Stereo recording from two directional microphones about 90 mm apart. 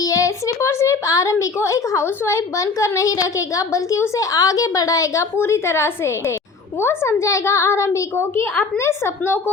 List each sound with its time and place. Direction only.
0.0 s a woman's voice: 40° left (ahead or behind)